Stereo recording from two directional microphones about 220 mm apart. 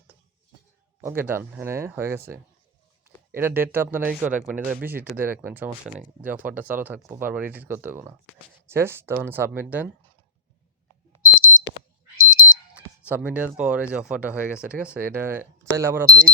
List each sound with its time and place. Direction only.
1.0 s speech: 10° right (ahead or behind)
11.3 s smoke detector: 65° left (ahead or behind)
12.1 s alarm: 65° left (ahead or behind)
12.7 s speech: 5° right (ahead or behind)